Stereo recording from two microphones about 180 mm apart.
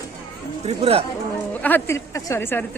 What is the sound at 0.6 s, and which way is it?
Speech, 35° right (ahead or behind).